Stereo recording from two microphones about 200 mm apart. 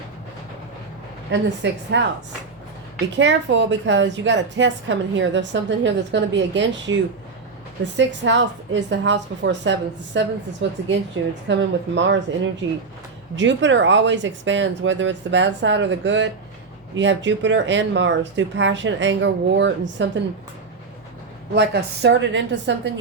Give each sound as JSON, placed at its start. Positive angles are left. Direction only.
{"t": 1.3, "sound": "a woman's voice", "side_deg": -60}
{"t": 3.2, "sound": "a woman's voice", "side_deg": -65}
{"t": 7.9, "sound": "a woman's voice", "side_deg": -65}
{"t": 13.3, "sound": "a woman's voice", "side_deg": -65}
{"t": 21.5, "sound": "a woman's voice", "side_deg": -55}